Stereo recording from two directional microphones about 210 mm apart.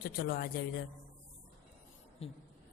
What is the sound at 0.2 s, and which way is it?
Speech, 45° left (ahead or behind).